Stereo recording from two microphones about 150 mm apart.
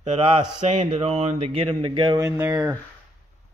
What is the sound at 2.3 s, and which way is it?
Speech, 15° right (ahead or behind).